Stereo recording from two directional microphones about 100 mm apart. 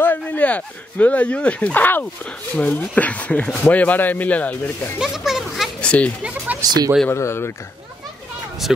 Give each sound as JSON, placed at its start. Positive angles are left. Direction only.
{"t": 0.0, "sound": "speech", "side_deg": 20}
{"t": 4.9, "sound": "speech", "side_deg": -5}
{"t": 5.8, "sound": "speech", "side_deg": 10}
{"t": 6.2, "sound": "speech", "side_deg": -15}
{"t": 7.1, "sound": "speech", "side_deg": 25}